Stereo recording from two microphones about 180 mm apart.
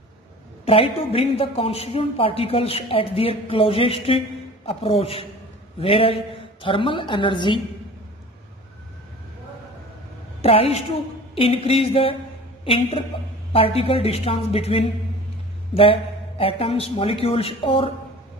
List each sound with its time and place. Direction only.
0.7 s a woman's voice: 30° left (ahead or behind)
10.4 s a woman's voice: 35° left (ahead or behind)